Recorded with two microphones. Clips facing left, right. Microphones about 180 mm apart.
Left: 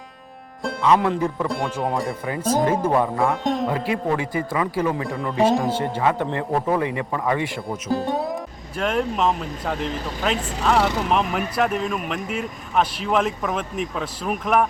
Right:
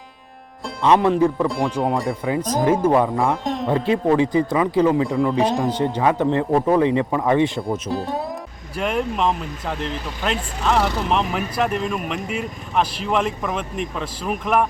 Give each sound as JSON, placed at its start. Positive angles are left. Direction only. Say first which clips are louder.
{"t": 0.8, "sound": "speech", "louder": "right 4 dB", "side_deg": -25}
{"t": 1.5, "sound": "speech", "louder": "right 3 dB", "side_deg": 0}
{"t": 2.8, "sound": "speech", "louder": "right 3 dB", "side_deg": -10}
{"t": 3.7, "sound": "speech", "louder": "right 5 dB", "side_deg": -25}
{"t": 5.0, "sound": "speech", "louder": "right 1 dB", "side_deg": 0}
{"t": 5.9, "sound": "a man's voice", "louder": "right 4 dB", "side_deg": -15}
{"t": 7.7, "sound": "speech", "louder": "even", "side_deg": 0}